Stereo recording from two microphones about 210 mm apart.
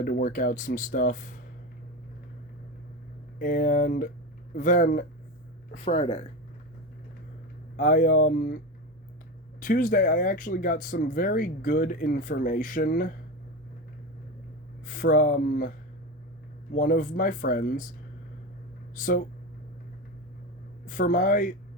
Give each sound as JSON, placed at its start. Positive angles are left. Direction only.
{"t": 0.0, "sound": "speech", "side_deg": 40}
{"t": 3.3, "sound": "speech", "side_deg": 40}
{"t": 5.8, "sound": "speech", "side_deg": 30}
{"t": 7.8, "sound": "speech", "side_deg": 40}
{"t": 9.6, "sound": "speech", "side_deg": 40}
{"t": 14.8, "sound": "speech", "side_deg": 40}
{"t": 16.7, "sound": "speech", "side_deg": 40}
{"t": 18.9, "sound": "speech", "side_deg": 40}
{"t": 20.8, "sound": "speech", "side_deg": 40}